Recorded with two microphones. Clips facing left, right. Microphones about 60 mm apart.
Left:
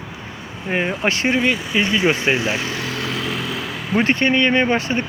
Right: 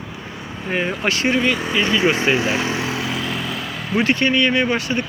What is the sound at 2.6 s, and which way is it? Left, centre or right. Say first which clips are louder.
Speech: right 3 dB; right.